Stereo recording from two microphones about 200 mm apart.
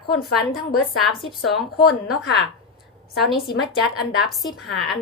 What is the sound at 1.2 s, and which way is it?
Speech, centre (ahead or behind).